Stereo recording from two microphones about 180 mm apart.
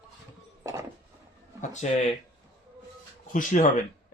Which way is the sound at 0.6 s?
15° right (ahead or behind).